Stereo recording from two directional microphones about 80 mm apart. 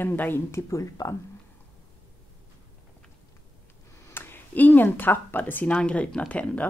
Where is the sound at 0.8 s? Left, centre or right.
Left.